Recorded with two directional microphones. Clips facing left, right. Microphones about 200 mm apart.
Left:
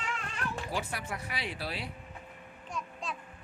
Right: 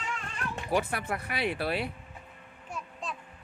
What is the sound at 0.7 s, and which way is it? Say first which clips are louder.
Speech: right 7 dB; 60° right (ahead or behind).